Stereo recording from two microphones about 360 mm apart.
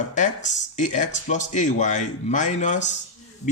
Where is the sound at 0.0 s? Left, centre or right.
Centre.